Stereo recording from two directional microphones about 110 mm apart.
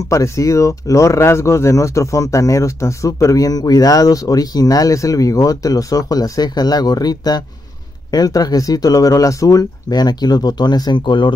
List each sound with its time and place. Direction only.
0.1 s speech: 30° left (ahead or behind); by 11.3 s 45° left (ahead or behind)